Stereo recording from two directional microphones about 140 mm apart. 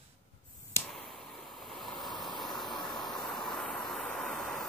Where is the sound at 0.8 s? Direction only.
Centre (ahead or behind).